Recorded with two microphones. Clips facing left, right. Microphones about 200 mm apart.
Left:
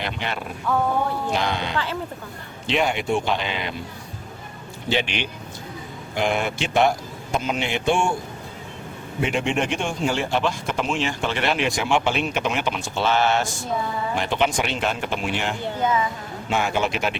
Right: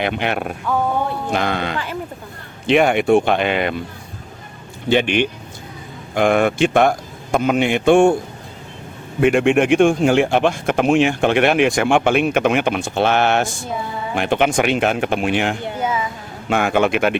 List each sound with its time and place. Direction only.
0.0 s a man's voice: 60° right (ahead or behind)
4.9 s a man's voice: 55° right (ahead or behind)
9.2 s speech: 55° right (ahead or behind)
15.6 s a sound: 10° right (ahead or behind)
16.5 s speech: 55° right (ahead or behind)